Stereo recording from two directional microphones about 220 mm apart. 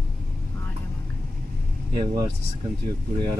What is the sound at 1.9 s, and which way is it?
Speech, 25° right (ahead or behind).